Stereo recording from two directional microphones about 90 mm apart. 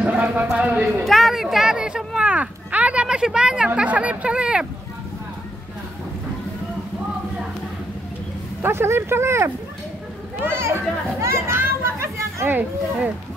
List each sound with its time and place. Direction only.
0.0 s clip-clop: 15° right (ahead or behind)
0.5 s speech: 10° right (ahead or behind)
1.0 s speech: centre (ahead or behind)
8.6 s speech: 30° right (ahead or behind)